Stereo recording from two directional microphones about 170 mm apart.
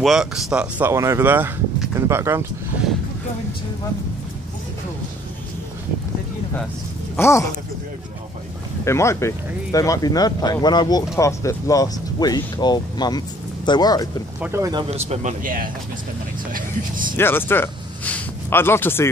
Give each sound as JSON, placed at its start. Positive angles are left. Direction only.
{"t": 0.0, "sound": "speech", "side_deg": 0}
{"t": 7.2, "sound": "speech", "side_deg": 15}
{"t": 8.8, "sound": "speech", "side_deg": 15}
{"t": 14.4, "sound": "speech", "side_deg": -15}
{"t": 14.7, "sound": "a man's voice", "side_deg": -30}
{"t": 17.2, "sound": "speech", "side_deg": 15}